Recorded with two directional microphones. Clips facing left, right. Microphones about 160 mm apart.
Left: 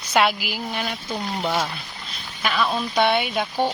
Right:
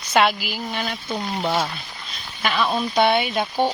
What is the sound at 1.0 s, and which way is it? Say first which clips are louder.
Speech: right 2 dB; 5° right (ahead or behind).